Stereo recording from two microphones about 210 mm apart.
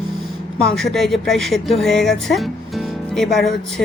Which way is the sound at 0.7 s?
Centre (ahead or behind).